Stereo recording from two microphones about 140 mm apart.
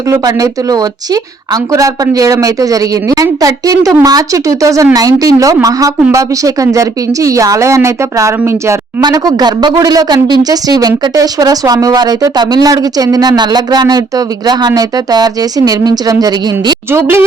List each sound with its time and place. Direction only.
0.1 s a woman's voice: 25° right (ahead or behind)